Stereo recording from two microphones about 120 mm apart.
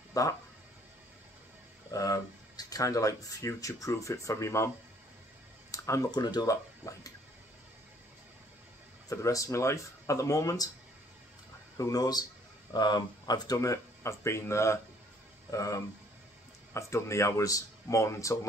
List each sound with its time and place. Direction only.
0.1 s speech: 30° left (ahead or behind)
1.9 s speech: 30° left (ahead or behind)
5.7 s speech: 25° left (ahead or behind)
9.1 s speech: 25° left (ahead or behind)
11.7 s speech: 30° left (ahead or behind)